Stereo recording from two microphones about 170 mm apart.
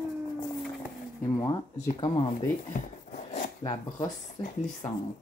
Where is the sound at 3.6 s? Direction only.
25° left (ahead or behind).